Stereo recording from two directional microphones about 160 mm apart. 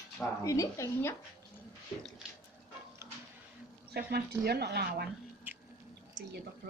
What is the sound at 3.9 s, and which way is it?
A woman's voice, 75° right (ahead or behind).